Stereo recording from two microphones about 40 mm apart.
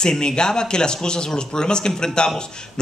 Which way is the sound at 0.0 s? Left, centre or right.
Centre.